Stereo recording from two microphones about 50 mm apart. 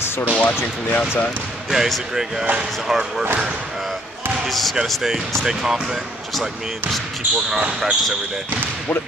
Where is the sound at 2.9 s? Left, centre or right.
Centre.